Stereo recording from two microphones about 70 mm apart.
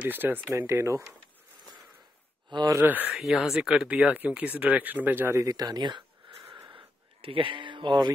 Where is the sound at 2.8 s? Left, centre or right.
Right.